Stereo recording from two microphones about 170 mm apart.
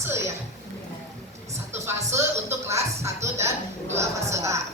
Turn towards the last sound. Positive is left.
turn(degrees=-15)  # may be behind; listen again after turning